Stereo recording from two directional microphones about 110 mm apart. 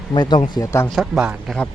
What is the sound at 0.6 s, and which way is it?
Speech, 25° left (ahead or behind).